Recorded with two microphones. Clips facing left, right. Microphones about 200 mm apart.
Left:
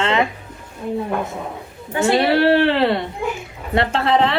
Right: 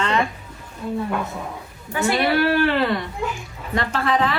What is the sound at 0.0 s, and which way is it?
Music, 25° left (ahead or behind).